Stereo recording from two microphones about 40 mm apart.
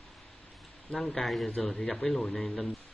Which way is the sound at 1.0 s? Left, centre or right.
Centre.